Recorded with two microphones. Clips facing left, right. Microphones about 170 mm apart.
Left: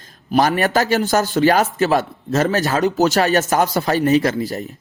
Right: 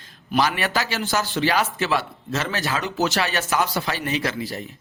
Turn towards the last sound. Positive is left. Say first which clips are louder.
# left 7 dB
turn(degrees=45)  # may be behind; listen again after turning